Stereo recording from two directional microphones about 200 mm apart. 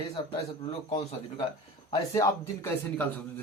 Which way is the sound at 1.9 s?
20° left (ahead or behind).